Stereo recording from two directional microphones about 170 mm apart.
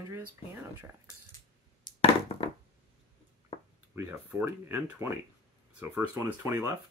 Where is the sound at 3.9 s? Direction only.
15° right (ahead or behind).